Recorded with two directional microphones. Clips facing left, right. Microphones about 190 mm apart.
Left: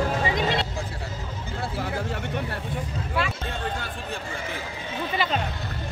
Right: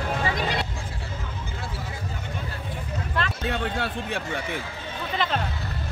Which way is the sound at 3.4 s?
75° right (ahead or behind).